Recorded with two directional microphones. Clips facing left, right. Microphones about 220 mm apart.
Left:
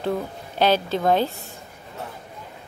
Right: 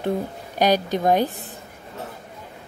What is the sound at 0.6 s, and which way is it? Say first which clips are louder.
Speech: right 1 dB; 15° right (ahead or behind).